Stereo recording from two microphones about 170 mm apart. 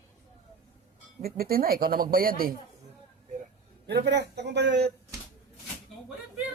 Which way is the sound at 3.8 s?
85° right.